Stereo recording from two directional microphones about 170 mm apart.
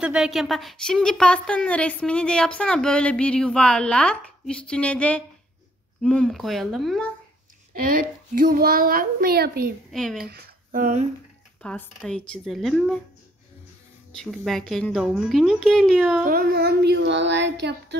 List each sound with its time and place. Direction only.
0.0 s a woman's voice: 5° right (ahead or behind)
7.7 s a child's voice: 55° right (ahead or behind)
9.9 s a woman's voice: centre (ahead or behind)
10.2 s speech: 65° right (ahead or behind); by 11.1 s 50° right (ahead or behind)
11.6 s a woman's voice: 5° left (ahead or behind)
14.1 s a woman's voice: centre (ahead or behind)
16.3 s child singing: 60° right (ahead or behind); by 17.9 s 90° right